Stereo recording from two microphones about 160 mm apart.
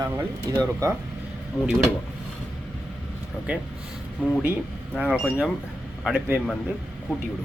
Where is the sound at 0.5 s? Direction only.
20° right (ahead or behind).